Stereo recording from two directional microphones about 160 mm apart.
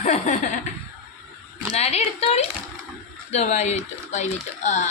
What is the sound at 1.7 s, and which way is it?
Speech, 40° left (ahead or behind).